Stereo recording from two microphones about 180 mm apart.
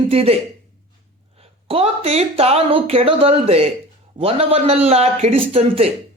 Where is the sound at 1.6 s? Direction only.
30° right (ahead or behind).